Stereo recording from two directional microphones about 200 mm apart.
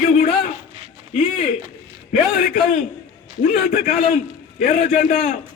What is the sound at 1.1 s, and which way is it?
Speech, 30° left (ahead or behind).